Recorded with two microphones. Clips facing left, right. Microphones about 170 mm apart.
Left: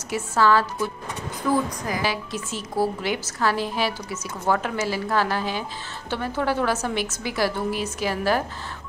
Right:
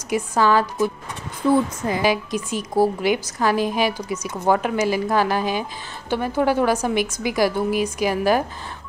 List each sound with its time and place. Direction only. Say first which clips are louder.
0.1 s a woman's voice: right 2 dB; 15° right (ahead or behind)
1.9 s a woman's voice: right 6 dB; 15° right (ahead or behind)